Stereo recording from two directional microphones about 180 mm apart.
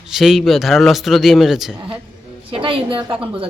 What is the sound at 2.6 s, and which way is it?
Speech, 30° right (ahead or behind).